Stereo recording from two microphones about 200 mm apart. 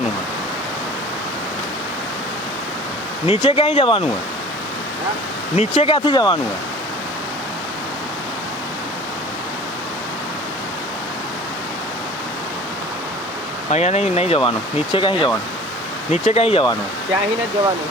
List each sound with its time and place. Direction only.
3.2 s speech: 30° left (ahead or behind)
5.5 s speech: 25° left (ahead or behind)
13.7 s speech: 35° left (ahead or behind)